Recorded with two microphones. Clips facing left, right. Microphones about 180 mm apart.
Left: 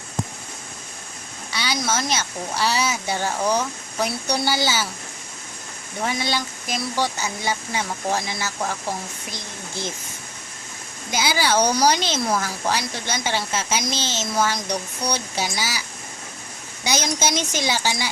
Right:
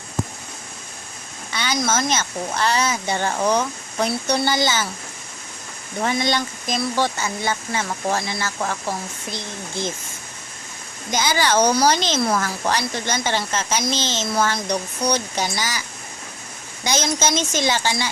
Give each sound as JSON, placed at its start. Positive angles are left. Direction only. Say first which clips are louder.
{"t": 1.5, "sound": "speech", "louder": "right 3 dB", "side_deg": 10}
{"t": 6.1, "sound": "speech", "louder": "right 4 dB", "side_deg": 5}
{"t": 11.1, "sound": "speech", "louder": "right 1 dB", "side_deg": 10}
{"t": 16.8, "sound": "speech", "louder": "right 2 dB", "side_deg": 10}